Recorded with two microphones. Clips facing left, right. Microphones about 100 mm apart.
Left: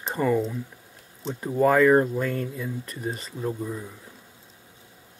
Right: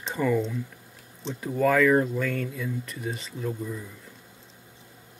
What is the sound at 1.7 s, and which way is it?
Speech, 35° left (ahead or behind).